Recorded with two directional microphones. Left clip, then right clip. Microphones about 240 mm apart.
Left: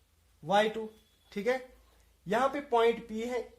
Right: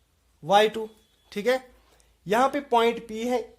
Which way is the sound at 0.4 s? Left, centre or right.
Right.